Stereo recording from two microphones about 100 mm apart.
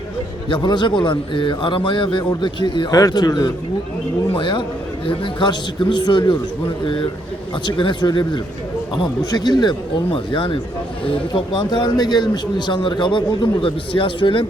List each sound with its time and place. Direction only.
0.4 s a man's voice: 50° left (ahead or behind)
2.9 s a man's voice: 40° left (ahead or behind)
4.4 s a man's voice: 55° left (ahead or behind)
10.1 s a man's voice: 60° left (ahead or behind)